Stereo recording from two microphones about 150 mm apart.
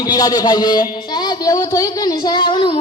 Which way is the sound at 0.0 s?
25° left (ahead or behind).